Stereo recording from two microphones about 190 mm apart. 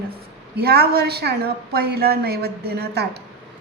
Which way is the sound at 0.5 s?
55° right (ahead or behind).